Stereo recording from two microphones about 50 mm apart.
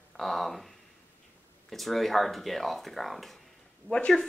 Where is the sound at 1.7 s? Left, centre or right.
Centre.